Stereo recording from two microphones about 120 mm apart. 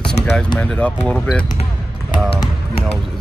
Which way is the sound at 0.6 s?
10° left (ahead or behind).